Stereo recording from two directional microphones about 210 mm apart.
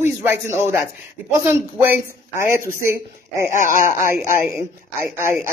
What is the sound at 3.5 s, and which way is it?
Speech, 40° left (ahead or behind).